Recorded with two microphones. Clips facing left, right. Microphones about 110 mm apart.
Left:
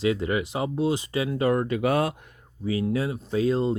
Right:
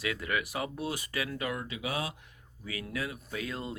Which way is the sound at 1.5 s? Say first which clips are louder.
Left 13 dB; 50° left (ahead or behind).